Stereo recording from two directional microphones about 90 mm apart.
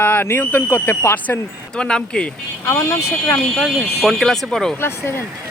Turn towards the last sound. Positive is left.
turn(degrees=30)  # may be behind; listen again after turning